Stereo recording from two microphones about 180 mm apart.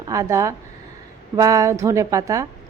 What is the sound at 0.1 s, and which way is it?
A woman's voice, 15° right (ahead or behind).